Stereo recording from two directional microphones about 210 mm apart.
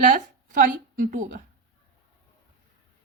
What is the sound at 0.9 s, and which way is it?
Speech, 40° right (ahead or behind).